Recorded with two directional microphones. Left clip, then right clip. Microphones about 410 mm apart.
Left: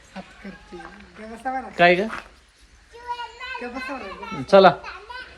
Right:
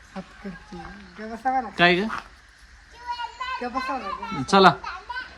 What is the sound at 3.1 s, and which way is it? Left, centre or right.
Children playing, centre.